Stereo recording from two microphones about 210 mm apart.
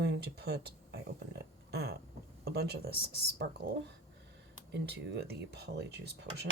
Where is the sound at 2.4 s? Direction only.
50° right (ahead or behind).